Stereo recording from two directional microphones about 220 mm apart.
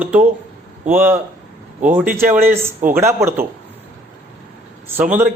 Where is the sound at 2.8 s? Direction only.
35° right (ahead or behind).